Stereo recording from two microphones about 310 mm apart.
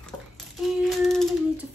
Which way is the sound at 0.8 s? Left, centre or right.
Centre.